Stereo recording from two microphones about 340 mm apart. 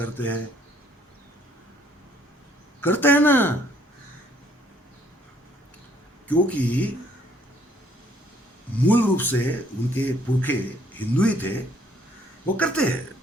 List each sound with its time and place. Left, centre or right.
0.0 s speech: centre
2.8 s speech: centre
6.2 s speech: centre
8.9 s speech: centre